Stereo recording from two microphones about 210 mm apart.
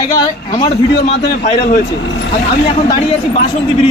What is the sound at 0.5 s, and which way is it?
A man's voice, 30° left (ahead or behind).